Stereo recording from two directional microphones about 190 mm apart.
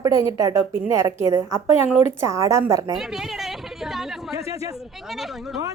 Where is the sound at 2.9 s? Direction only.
Centre (ahead or behind).